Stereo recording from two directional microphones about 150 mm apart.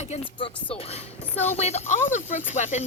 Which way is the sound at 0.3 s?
35° left (ahead or behind).